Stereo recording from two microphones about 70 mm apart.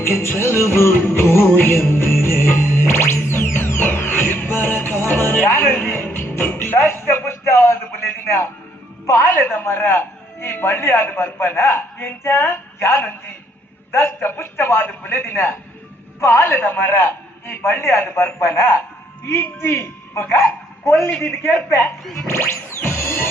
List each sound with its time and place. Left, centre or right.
0.0 s music: left
9.6 s a man's voice: left